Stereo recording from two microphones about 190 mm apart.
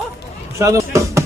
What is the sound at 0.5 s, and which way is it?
Chop, 15° right (ahead or behind).